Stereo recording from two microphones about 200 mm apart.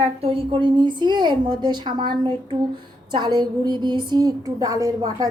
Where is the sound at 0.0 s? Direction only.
30° right (ahead or behind).